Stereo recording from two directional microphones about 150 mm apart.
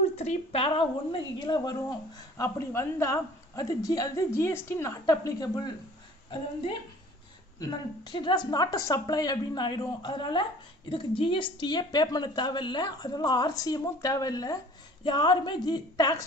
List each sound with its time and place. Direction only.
0.2 s a woman's voice: 45° left (ahead or behind); by 5.7 s 25° left (ahead or behind)
7.6 s a woman's voice: 30° left (ahead or behind)